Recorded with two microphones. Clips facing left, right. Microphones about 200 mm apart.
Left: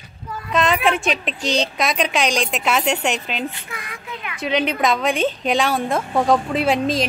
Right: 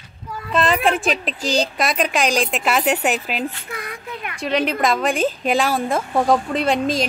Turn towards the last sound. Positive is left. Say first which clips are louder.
# even
turn(degrees=0)  # may be behind; listen again after turning